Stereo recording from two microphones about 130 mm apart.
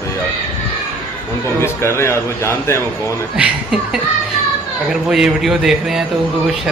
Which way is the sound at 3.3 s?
10° right (ahead or behind).